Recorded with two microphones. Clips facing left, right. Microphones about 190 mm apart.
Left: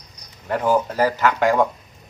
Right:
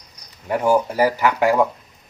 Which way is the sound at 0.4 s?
10° right (ahead or behind).